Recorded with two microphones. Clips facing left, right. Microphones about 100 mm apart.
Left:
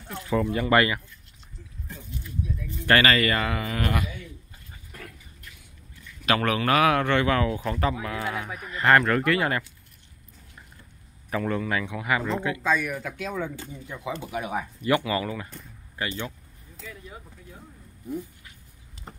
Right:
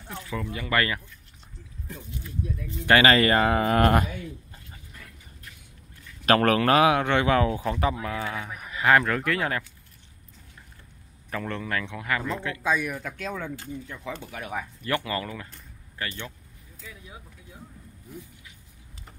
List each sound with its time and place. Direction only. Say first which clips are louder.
0.3 s speech: left 8 dB; 40° left (ahead or behind)
2.9 s speech: right 2 dB; 25° right (ahead or behind); by 4.6 s 45° right (ahead or behind)
6.2 s speech: right 4 dB; 45° right (ahead or behind)
6.9 s speech: even; 15° right (ahead or behind)
8.0 s speech: left 1 dB; 10° left (ahead or behind)
8.5 s speech: left 1 dB; 5° right (ahead or behind)
11.2 s a man's voice: left 5 dB; 10° left (ahead or behind)
12.6 s speech: right 2 dB; 5° right (ahead or behind); by 16.3 s 15° left (ahead or behind)